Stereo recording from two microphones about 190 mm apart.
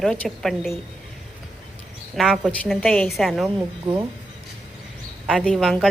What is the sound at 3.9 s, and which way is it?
Speech, 25° right (ahead or behind).